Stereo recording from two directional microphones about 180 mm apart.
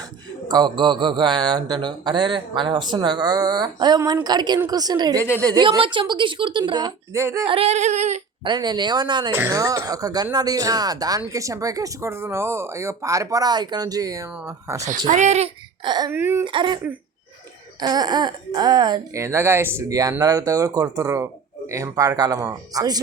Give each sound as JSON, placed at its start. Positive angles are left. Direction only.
{"t": 0.4, "sound": "speech", "side_deg": -25}
{"t": 7.4, "sound": "a sound", "side_deg": -30}
{"t": 8.4, "sound": "speech", "side_deg": -25}
{"t": 14.8, "sound": "a sound", "side_deg": -45}
{"t": 15.8, "sound": "speech", "side_deg": -25}
{"t": 16.1, "sound": "speech", "side_deg": -10}
{"t": 16.4, "sound": "speech", "side_deg": -25}